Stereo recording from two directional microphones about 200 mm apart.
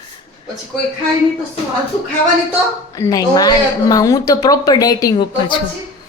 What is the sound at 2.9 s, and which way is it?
A woman's voice, 15° left (ahead or behind).